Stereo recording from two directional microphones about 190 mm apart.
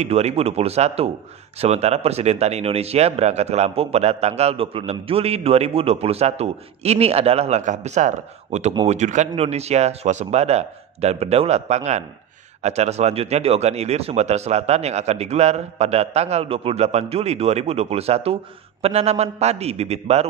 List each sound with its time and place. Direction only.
0.0 s speech: 35° right (ahead or behind)